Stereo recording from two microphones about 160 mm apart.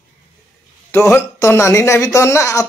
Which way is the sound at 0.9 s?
15° left (ahead or behind).